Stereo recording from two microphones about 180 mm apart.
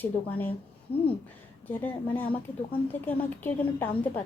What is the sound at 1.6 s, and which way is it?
A woman's voice, 10° left (ahead or behind).